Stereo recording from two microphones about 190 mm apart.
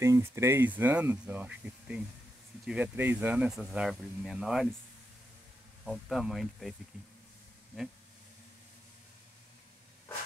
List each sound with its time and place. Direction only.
0.0 s speech: 15° right (ahead or behind)
5.9 s speech: centre (ahead or behind)